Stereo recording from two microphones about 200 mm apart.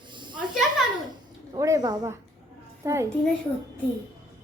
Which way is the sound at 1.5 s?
15° right (ahead or behind).